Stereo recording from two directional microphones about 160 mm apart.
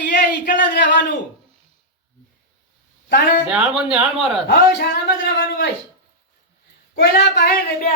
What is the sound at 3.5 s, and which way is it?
Speech, 5° right (ahead or behind).